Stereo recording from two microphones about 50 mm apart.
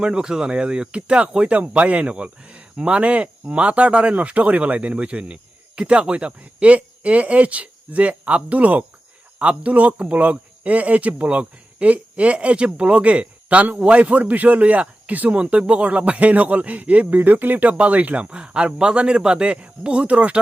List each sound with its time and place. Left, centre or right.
0.0 s speech: centre